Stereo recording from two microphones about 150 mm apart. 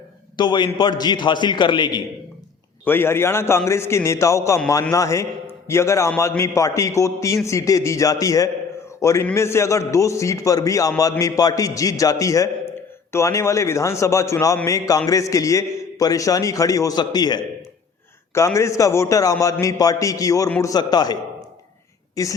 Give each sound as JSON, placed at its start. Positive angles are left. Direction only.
{"t": 0.3, "sound": "a man's voice", "side_deg": 30}
{"t": 2.8, "sound": "a man's voice", "side_deg": 15}